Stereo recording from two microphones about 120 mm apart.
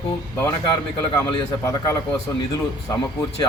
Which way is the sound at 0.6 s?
35° left (ahead or behind).